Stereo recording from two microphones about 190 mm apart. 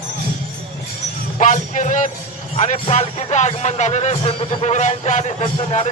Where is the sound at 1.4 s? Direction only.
40° left (ahead or behind).